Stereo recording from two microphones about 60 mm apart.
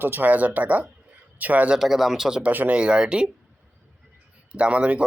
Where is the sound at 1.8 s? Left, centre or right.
Centre.